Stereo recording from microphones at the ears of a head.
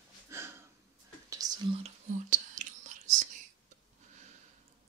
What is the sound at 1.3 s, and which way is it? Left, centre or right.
Whispering, right.